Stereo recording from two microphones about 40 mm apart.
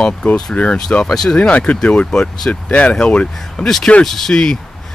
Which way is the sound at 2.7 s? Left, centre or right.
Left.